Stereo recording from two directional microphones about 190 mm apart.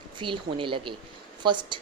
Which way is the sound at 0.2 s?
25° right (ahead or behind).